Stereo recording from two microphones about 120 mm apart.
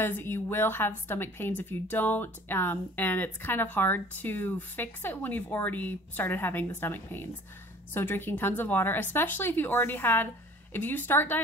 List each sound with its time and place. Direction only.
0.0 s a woman's voice: 20° left (ahead or behind)